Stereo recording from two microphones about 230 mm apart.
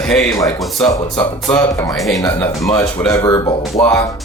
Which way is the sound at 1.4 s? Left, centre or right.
Centre.